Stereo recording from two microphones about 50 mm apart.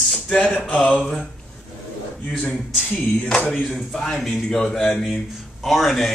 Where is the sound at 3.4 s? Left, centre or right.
Left.